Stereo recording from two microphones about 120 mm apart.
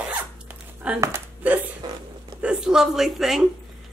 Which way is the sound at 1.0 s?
15° right (ahead or behind).